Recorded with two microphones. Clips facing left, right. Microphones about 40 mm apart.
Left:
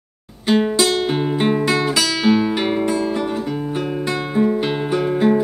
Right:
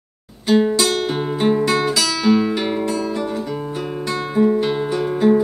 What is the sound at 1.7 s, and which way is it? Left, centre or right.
Music, centre.